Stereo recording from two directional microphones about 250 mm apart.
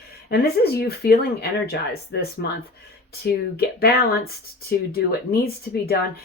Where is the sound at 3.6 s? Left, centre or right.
Left.